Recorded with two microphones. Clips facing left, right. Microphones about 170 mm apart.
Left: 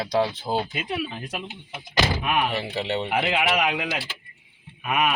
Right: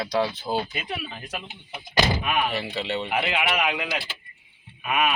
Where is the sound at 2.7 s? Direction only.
20° left (ahead or behind).